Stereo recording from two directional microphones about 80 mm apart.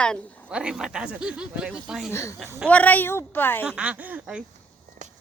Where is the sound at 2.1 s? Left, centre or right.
Left.